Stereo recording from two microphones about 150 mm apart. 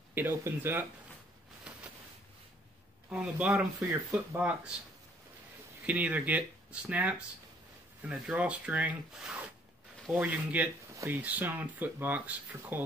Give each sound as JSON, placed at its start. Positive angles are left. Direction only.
{"t": 0.1, "sound": "speech", "side_deg": -15}
{"t": 3.1, "sound": "speech", "side_deg": -5}
{"t": 3.8, "sound": "speech", "side_deg": -20}
{"t": 4.4, "sound": "speech", "side_deg": -10}
{"t": 5.9, "sound": "speech", "side_deg": -10}